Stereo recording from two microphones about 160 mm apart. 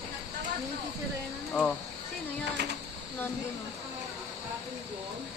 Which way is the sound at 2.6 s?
90° right.